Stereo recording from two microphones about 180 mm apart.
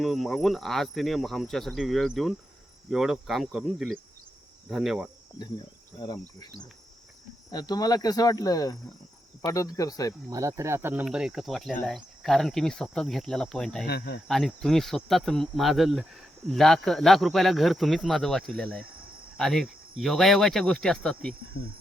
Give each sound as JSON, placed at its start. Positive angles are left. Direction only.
{"t": 0.0, "sound": "speech", "side_deg": 0}
{"t": 6.0, "sound": "speech", "side_deg": 20}
{"t": 7.5, "sound": "speech", "side_deg": 20}
{"t": 10.2, "sound": "speech", "side_deg": -20}
{"t": 13.8, "sound": "speech", "side_deg": 60}
{"t": 14.3, "sound": "speech", "side_deg": 0}